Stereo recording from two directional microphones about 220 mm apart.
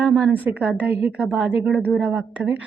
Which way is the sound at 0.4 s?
5° right (ahead or behind).